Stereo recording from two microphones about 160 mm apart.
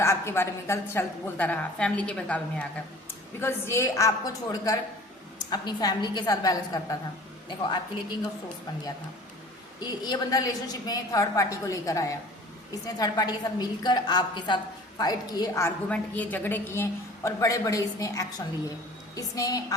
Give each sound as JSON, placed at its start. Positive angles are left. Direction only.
{"t": 0.0, "sound": "a woman's voice", "side_deg": 15}
{"t": 9.8, "sound": "a woman's voice", "side_deg": 25}
{"t": 15.9, "sound": "a woman's voice", "side_deg": 10}